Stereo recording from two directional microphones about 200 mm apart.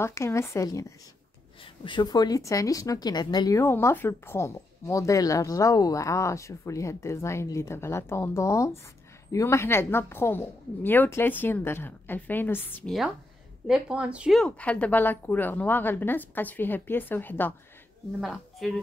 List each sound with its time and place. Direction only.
0.0 s a woman's voice: 15° left (ahead or behind)